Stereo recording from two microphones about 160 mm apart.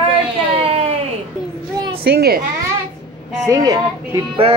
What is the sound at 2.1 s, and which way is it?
Speech, 75° right (ahead or behind).